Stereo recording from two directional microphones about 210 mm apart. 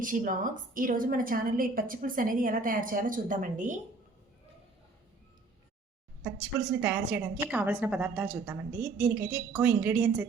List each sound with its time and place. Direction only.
0.0 s a woman's voice: 40° right (ahead or behind)
6.8 s a woman's voice: 5° right (ahead or behind)